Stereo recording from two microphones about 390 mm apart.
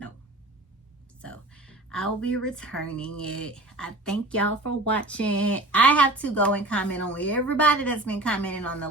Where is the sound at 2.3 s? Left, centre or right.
Centre.